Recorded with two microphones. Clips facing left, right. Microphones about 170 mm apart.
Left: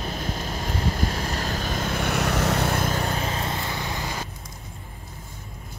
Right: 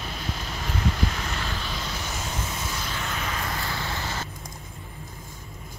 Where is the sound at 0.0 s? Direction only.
45° left (ahead or behind).